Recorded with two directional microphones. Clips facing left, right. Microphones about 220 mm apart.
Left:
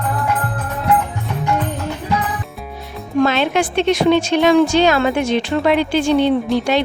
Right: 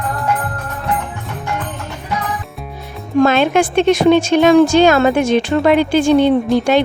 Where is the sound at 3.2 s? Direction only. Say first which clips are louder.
Right 4 dB; 50° right (ahead or behind).